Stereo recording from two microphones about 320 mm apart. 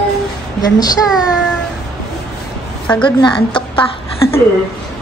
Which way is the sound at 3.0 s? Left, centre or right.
Centre.